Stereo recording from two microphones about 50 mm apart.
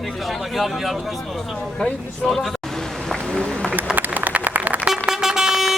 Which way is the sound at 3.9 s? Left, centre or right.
Right.